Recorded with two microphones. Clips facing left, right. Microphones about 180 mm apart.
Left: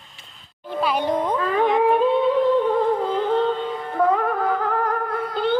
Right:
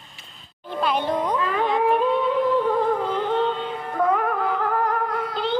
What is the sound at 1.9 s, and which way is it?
Music, 30° left (ahead or behind).